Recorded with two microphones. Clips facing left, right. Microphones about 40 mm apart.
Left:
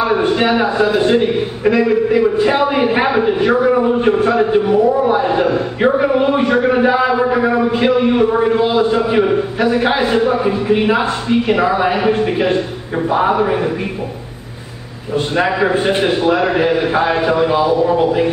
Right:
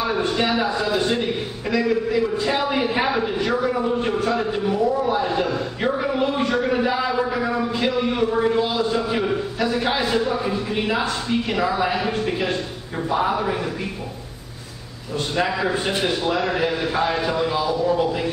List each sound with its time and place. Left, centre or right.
0.0 s a man's voice: left
15.1 s a man's voice: left